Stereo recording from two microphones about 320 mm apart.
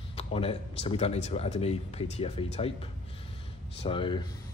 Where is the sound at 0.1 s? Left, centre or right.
Centre.